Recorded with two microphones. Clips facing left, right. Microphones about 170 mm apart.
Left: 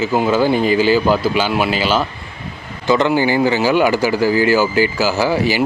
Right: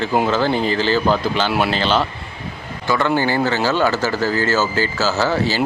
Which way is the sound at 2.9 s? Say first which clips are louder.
Left 4 dB; 20° left (ahead or behind).